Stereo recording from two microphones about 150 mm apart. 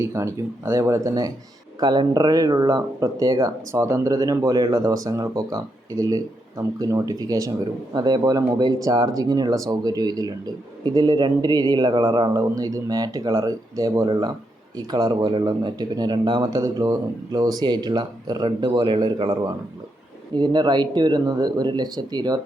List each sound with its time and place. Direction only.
0.0 s speech: 20° right (ahead or behind)